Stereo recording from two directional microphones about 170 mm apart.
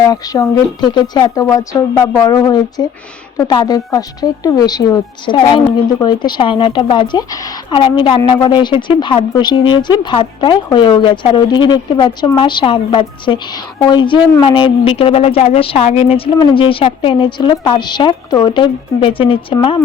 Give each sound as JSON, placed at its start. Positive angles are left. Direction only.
{"t": 0.1, "sound": "a woman's voice", "side_deg": 25}